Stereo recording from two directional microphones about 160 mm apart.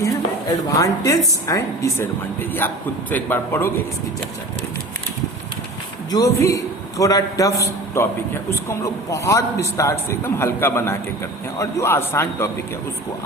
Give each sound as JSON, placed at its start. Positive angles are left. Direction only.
{"t": 0.7, "sound": "a man's voice", "side_deg": 20}
{"t": 6.1, "sound": "a man's voice", "side_deg": 20}